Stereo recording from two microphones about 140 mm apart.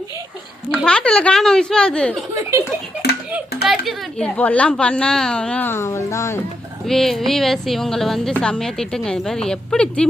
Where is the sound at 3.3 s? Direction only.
Centre (ahead or behind); by 6.4 s 20° left (ahead or behind).